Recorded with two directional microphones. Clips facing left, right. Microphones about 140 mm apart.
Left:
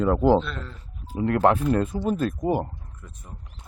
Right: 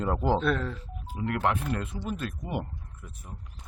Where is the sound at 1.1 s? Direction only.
40° left (ahead or behind).